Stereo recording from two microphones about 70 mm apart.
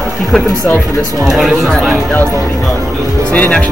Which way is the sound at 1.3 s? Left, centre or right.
Centre.